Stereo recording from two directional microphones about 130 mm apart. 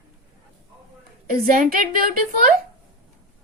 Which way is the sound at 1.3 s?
90° right.